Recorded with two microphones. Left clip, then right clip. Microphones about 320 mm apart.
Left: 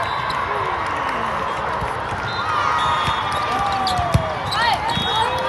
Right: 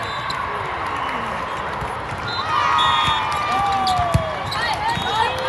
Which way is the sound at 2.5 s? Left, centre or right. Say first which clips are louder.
Right 2 dB; right.